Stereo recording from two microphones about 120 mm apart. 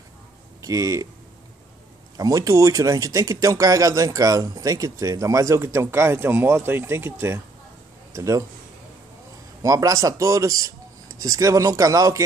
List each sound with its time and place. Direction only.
0.6 s speech: 30° right (ahead or behind)
2.1 s a man's voice: 30° right (ahead or behind)
9.6 s speech: 30° right (ahead or behind)